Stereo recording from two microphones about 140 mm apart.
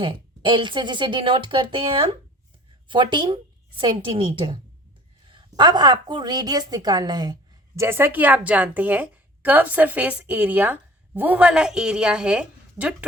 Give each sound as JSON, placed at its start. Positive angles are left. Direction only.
{"t": 0.0, "sound": "a woman's voice", "side_deg": -35}
{"t": 7.8, "sound": "a woman's voice", "side_deg": -15}